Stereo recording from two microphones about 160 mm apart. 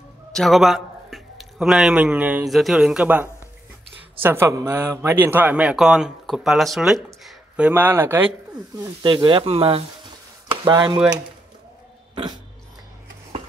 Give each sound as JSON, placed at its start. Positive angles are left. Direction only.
{"t": 0.3, "sound": "speech", "side_deg": 0}
{"t": 8.7, "sound": "speech", "side_deg": -25}
{"t": 10.5, "sound": "speech", "side_deg": -25}